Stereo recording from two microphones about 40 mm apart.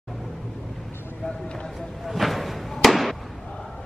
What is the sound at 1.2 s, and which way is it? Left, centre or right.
Speech, left.